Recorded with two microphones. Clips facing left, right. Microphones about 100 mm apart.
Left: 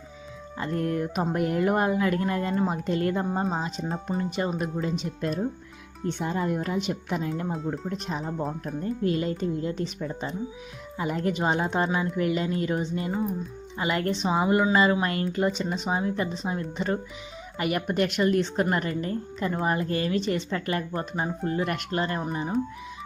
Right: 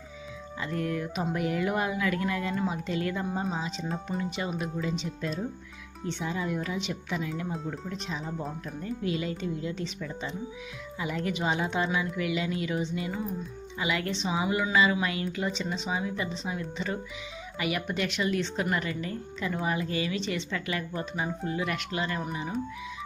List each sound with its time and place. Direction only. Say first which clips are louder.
0.6 s a woman's voice: left 4 dB; 45° left (ahead or behind)